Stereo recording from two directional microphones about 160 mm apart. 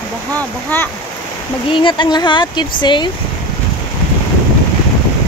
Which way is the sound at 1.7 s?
30° left (ahead or behind).